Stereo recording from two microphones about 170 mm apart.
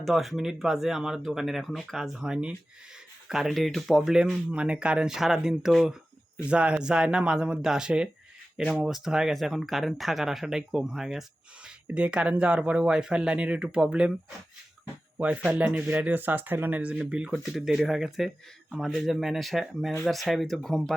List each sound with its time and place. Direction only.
0.0 s speech: centre (ahead or behind)
15.2 s speech: 10° right (ahead or behind)